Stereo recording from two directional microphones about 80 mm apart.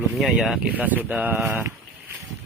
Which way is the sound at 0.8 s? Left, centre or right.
Centre.